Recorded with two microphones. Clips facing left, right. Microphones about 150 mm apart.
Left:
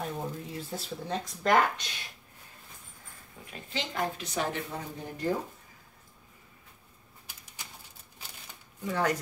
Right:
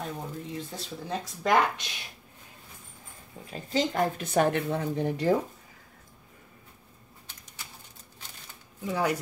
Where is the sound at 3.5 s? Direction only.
35° right (ahead or behind); by 5.3 s 85° right.